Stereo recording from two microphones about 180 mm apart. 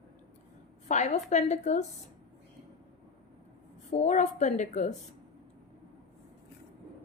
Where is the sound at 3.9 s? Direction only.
40° left (ahead or behind).